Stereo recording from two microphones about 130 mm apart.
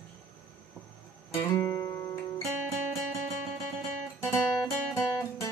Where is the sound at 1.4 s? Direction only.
20° left (ahead or behind).